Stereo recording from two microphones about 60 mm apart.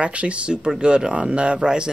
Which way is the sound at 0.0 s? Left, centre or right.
Right.